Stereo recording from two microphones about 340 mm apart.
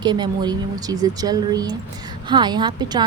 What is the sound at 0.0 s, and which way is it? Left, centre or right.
A woman's voice, centre.